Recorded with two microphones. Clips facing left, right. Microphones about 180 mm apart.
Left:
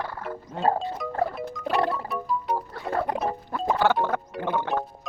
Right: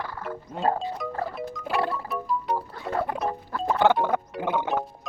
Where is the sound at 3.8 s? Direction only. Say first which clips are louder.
Right 3 dB; 20° right (ahead or behind).